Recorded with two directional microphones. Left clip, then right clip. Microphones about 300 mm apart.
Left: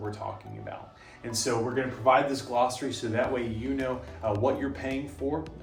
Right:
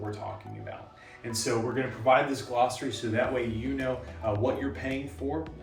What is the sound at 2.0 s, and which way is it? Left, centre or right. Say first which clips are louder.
Speech: left 1 dB; centre.